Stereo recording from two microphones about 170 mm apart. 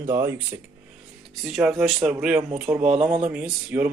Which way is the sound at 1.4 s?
Centre (ahead or behind).